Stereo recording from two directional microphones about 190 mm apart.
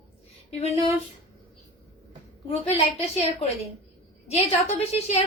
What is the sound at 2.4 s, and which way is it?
A woman's voice, 35° left (ahead or behind).